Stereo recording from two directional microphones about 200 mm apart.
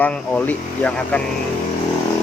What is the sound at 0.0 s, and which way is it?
Speech, 5° left (ahead or behind).